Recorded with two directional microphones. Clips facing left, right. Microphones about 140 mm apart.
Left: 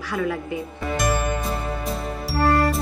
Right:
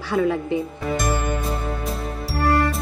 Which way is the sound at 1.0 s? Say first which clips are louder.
Left 3 dB; centre (ahead or behind).